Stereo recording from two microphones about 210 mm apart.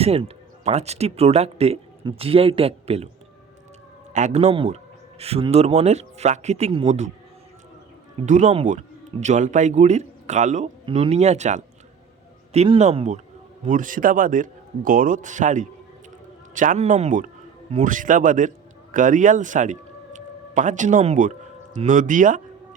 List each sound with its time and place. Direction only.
0.0 s speech: 30° right (ahead or behind)
4.1 s a man's voice: 30° right (ahead or behind)
8.3 s a man's voice: 35° right (ahead or behind)